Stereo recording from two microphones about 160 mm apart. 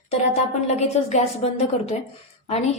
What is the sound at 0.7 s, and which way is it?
A woman's voice, 45° left (ahead or behind).